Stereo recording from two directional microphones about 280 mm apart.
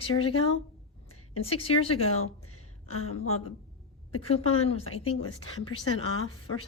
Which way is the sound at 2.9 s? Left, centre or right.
Left.